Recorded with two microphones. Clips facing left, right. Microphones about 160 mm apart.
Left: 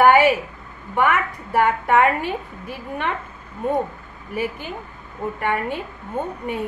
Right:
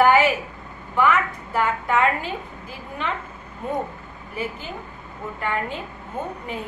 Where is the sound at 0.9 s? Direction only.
60° left (ahead or behind).